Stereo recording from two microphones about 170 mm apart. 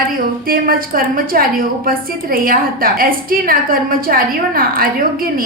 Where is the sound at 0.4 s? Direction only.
60° right (ahead or behind).